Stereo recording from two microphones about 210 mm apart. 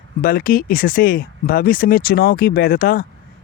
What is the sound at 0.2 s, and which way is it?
Speech, 45° left (ahead or behind).